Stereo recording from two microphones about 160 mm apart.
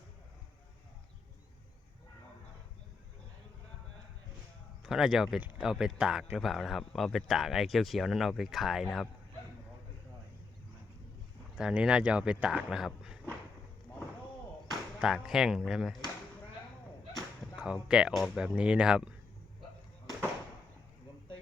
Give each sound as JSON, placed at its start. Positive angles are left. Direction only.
{"t": 4.8, "sound": "speech", "side_deg": -5}
{"t": 11.5, "sound": "speech", "side_deg": -5}
{"t": 14.9, "sound": "speech", "side_deg": -5}
{"t": 17.6, "sound": "speech", "side_deg": -5}